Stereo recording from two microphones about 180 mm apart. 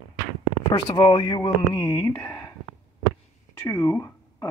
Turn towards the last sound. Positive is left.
turn(degrees=15)  # may be behind; listen again after turning